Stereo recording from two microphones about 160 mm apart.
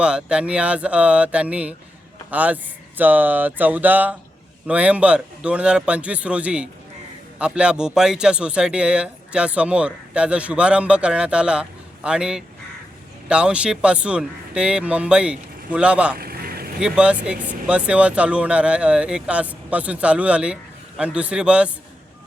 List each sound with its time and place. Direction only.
0.0 s a man's voice: 5° right (ahead or behind)
16.1 s vehicle: 70° right (ahead or behind)
16.8 s speech: 5° right (ahead or behind)